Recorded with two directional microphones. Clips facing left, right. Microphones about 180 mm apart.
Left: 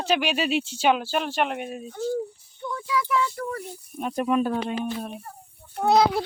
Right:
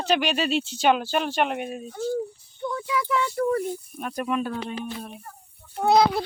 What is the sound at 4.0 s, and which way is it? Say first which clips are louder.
Speech: left 9 dB; 20° left (ahead or behind).